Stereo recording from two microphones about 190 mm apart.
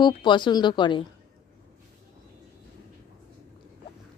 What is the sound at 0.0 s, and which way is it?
Speech, 25° left (ahead or behind).